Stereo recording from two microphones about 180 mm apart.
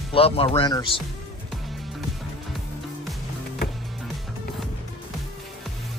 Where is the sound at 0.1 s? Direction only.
30° left (ahead or behind).